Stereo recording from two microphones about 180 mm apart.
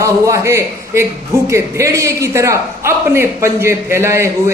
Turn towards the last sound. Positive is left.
turn(degrees=-15)  # may be behind; listen again after turning